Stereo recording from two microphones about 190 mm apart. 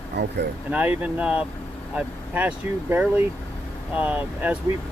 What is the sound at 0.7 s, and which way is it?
Speech, 10° right (ahead or behind).